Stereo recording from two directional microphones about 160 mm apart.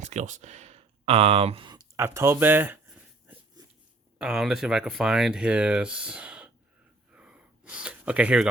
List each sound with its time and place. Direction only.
0.0 s speech: 45° right (ahead or behind)
2.0 s a sound: 15° right (ahead or behind)
4.2 s speech: 5° right (ahead or behind)
7.1 s gasp: 5° right (ahead or behind)